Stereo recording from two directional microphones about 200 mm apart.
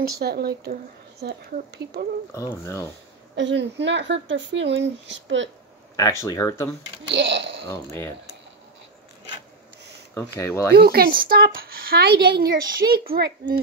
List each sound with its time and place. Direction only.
0.2 s a woman's voice: 50° right (ahead or behind)
2.6 s speech: 15° left (ahead or behind)
3.3 s speech: 65° right (ahead or behind)
5.9 s speech: 15° left (ahead or behind)
7.1 s speech: 60° right (ahead or behind)
7.7 s speech: 10° left (ahead or behind)
10.1 s speech: 15° left (ahead or behind)
10.8 s a woman's voice: 50° right (ahead or behind)